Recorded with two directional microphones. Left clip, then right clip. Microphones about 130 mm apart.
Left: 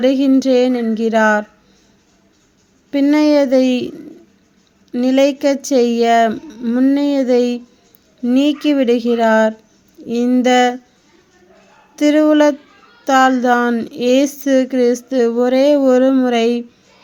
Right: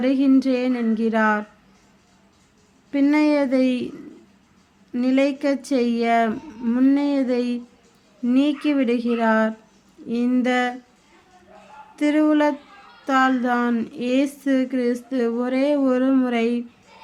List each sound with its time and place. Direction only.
0.0 s speech: 40° left (ahead or behind)
2.9 s speech: 35° left (ahead or behind)
11.9 s speech: 40° left (ahead or behind)